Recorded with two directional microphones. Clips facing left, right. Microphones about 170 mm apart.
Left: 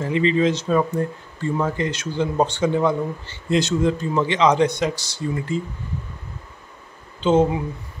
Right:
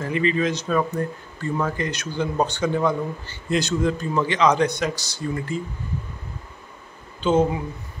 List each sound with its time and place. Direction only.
0.0 s speech: 25° left (ahead or behind)
7.2 s speech: 25° left (ahead or behind)